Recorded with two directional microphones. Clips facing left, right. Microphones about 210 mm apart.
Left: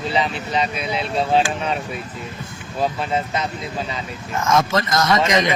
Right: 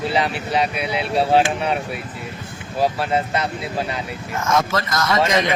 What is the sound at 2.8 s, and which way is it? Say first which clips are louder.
Speech: right 2 dB; 10° right (ahead or behind).